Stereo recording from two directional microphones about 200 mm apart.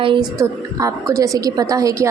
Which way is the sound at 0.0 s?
25° right (ahead or behind).